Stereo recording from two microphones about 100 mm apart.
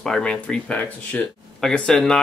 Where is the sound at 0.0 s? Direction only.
5° left (ahead or behind).